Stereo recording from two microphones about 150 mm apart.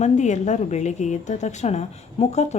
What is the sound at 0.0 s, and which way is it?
A woman's voice, 50° left (ahead or behind).